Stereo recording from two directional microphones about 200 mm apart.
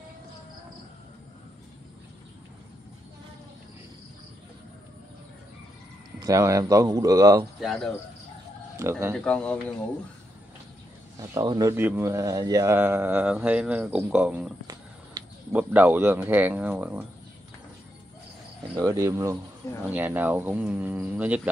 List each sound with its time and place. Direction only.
6.1 s speech: 15° right (ahead or behind)
7.6 s speech: centre (ahead or behind)
8.8 s speech: 15° right (ahead or behind)
9.2 s speech: 5° left (ahead or behind)
11.1 s speech: 20° right (ahead or behind)
15.5 s speech: 10° right (ahead or behind)
18.8 s speech: 15° right (ahead or behind)